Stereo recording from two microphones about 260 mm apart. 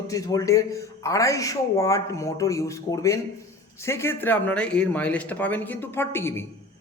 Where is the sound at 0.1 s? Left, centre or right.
Centre.